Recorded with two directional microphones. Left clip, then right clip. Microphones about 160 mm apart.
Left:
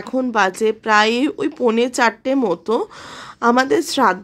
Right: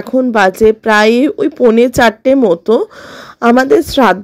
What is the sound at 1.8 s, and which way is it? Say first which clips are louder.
A woman's voice: right 8 dB; 30° right (ahead or behind).